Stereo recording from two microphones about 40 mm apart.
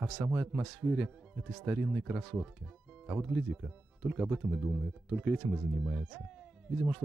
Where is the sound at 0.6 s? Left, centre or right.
Centre.